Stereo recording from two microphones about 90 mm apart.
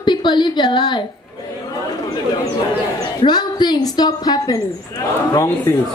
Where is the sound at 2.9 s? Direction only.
50° left (ahead or behind).